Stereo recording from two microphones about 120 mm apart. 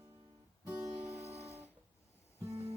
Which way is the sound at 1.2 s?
60° right (ahead or behind).